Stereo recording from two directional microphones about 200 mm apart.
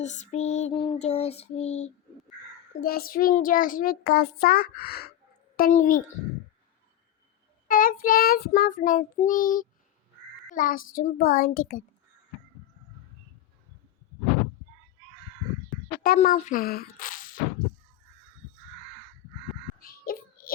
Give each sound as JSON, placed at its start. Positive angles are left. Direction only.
{"t": 0.0, "sound": "music", "side_deg": 35}
{"t": 2.8, "sound": "a child's voice", "side_deg": 45}
{"t": 7.7, "sound": "a child's voice", "side_deg": 45}
{"t": 16.0, "sound": "speech", "side_deg": 45}
{"t": 19.9, "sound": "child singing", "side_deg": 45}